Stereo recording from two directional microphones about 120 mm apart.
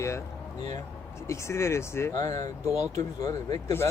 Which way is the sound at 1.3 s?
25° left (ahead or behind).